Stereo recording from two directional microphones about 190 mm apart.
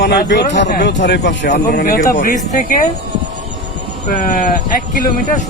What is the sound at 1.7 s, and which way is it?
A man's voice, 45° left (ahead or behind).